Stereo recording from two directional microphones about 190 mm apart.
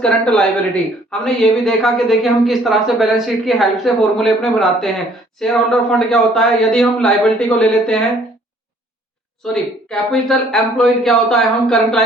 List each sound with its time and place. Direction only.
0.0 s speech: 5° left (ahead or behind)
9.4 s speech: 5° left (ahead or behind)